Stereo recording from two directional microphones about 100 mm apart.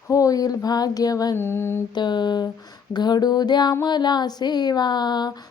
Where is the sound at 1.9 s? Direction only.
45° left (ahead or behind).